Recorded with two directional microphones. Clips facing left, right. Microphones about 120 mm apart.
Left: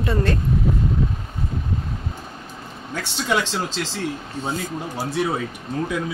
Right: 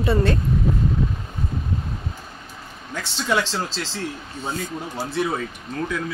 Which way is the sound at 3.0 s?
15° left (ahead or behind).